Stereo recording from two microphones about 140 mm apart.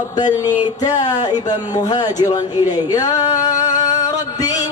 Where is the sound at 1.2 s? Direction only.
30° left (ahead or behind).